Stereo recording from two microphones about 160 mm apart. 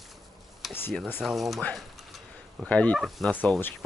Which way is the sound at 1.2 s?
Centre (ahead or behind).